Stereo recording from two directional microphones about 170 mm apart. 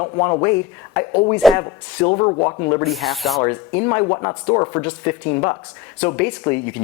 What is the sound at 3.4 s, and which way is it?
Speech, 20° left (ahead or behind).